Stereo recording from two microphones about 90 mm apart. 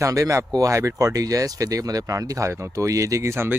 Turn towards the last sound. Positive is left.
turn(degrees=-30)  # may be behind; listen again after turning